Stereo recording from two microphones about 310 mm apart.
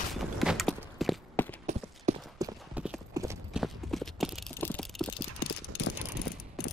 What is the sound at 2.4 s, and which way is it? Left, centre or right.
Clip-clop, centre.